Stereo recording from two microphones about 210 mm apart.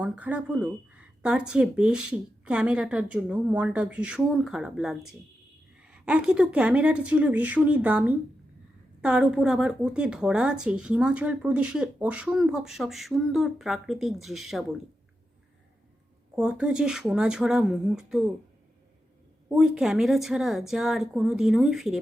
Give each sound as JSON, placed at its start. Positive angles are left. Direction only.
{"t": 0.0, "sound": "speech", "side_deg": -5}
{"t": 16.3, "sound": "speech", "side_deg": -5}
{"t": 19.5, "sound": "speech", "side_deg": -5}